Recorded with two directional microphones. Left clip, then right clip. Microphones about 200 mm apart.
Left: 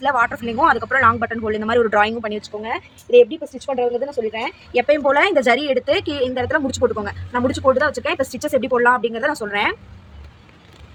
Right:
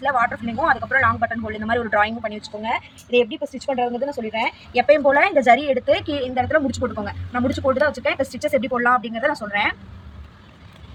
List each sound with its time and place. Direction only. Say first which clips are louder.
0.0 s speech: left 2 dB; 40° left (ahead or behind)
2.6 s speech: right 1 dB; 25° left (ahead or behind); by 9.7 s 45° left (ahead or behind)